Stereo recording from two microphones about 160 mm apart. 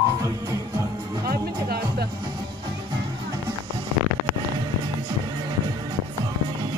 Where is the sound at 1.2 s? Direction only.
75° right (ahead or behind).